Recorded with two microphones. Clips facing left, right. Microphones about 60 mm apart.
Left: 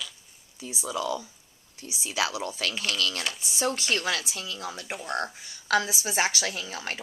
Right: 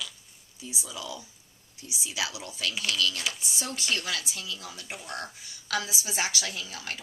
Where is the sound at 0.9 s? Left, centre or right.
Left.